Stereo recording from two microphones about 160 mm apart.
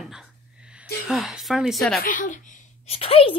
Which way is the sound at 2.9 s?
35° left (ahead or behind).